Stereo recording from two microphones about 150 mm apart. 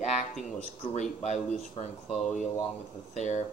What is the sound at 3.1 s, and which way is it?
Speech, 50° left (ahead or behind).